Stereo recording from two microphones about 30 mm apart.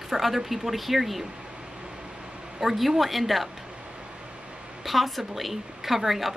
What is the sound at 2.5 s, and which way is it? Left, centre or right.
Speech, centre.